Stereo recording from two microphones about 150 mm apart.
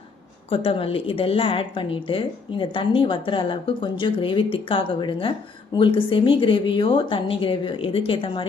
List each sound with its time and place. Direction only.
0.5 s a woman's voice: 40° left (ahead or behind)